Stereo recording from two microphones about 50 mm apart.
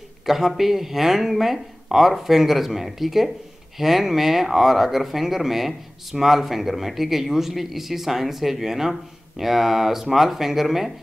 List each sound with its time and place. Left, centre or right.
0.5 s speech: centre